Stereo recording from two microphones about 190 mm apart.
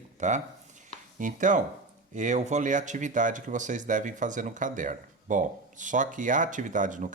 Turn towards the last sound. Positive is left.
turn(degrees=-40)  # may be behind; listen again after turning